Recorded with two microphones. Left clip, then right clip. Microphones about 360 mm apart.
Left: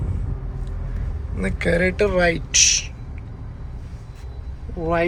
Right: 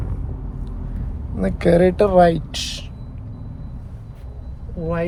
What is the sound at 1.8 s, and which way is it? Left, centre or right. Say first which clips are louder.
Speech: right 5 dB; right.